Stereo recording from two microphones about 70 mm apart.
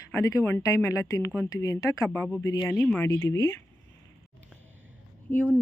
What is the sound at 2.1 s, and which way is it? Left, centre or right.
Speech, left.